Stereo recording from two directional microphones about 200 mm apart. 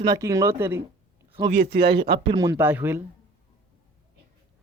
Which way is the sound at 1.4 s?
50° right (ahead or behind).